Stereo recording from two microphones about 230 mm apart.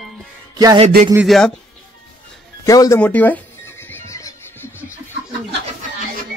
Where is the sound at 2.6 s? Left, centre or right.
Centre.